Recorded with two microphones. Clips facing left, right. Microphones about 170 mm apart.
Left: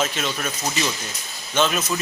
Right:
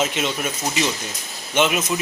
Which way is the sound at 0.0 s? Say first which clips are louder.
Right 2 dB; 20° right (ahead or behind).